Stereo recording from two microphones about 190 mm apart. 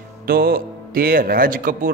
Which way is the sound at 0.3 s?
55° right (ahead or behind).